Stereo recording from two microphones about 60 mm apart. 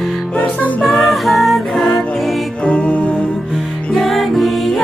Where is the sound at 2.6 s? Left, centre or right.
Left.